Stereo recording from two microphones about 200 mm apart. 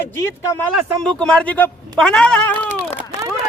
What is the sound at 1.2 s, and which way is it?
A man's voice, 5° left (ahead or behind).